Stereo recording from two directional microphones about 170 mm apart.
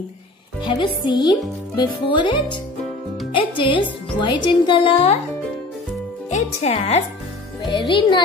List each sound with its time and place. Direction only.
0.7 s speech: 25° left (ahead or behind)
6.3 s speech: 35° left (ahead or behind)